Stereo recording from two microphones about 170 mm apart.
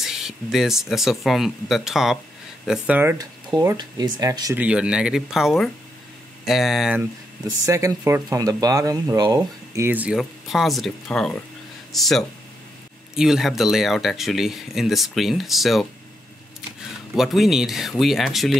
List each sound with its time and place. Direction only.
0.0 s speech: centre (ahead or behind)
3.6 s speech: 20° right (ahead or behind)
4.6 s speech: 5° right (ahead or behind)
7.4 s speech: 20° right (ahead or behind)
9.8 s speech: 10° right (ahead or behind)
17.1 s speech: centre (ahead or behind)